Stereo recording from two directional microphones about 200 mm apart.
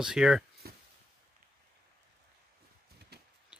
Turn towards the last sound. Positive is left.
turn(degrees=-55)  # may be behind; listen again after turning